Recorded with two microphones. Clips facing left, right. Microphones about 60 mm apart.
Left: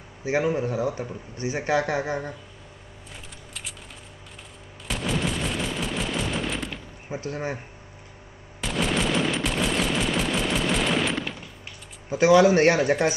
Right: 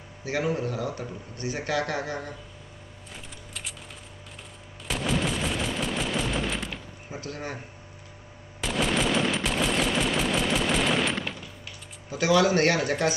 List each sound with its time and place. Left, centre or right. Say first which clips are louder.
0.2 s speech: left 4 dB; left
3.1 s keys jangling: even; centre
4.8 s machine gun: even; centre
7.1 s speech: left 5 dB; left
8.5 s machine gun: even; centre
12.1 s speech: left 5 dB; left